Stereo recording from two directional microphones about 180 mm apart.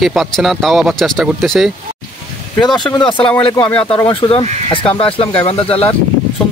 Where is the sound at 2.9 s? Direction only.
25° left (ahead or behind).